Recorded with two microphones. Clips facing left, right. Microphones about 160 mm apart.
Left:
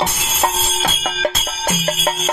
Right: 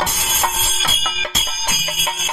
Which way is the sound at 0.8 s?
50° left (ahead or behind).